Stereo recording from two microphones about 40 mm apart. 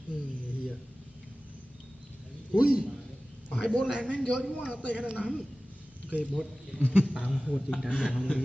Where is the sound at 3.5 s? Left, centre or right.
Left.